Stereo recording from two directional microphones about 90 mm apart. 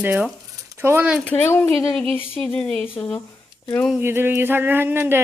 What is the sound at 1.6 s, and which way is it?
Speech, 15° left (ahead or behind).